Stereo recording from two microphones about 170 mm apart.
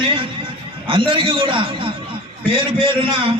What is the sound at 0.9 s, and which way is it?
A man's voice, 30° right (ahead or behind).